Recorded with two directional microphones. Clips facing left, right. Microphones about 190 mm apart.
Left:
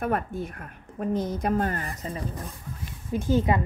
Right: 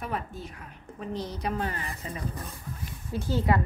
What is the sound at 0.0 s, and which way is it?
A woman's voice, 55° left (ahead or behind).